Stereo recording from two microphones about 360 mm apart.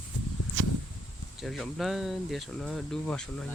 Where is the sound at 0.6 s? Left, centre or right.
Right.